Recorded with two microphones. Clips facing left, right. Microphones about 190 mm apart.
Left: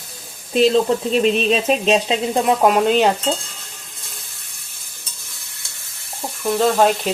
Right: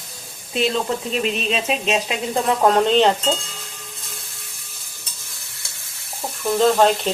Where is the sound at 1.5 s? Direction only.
40° left (ahead or behind).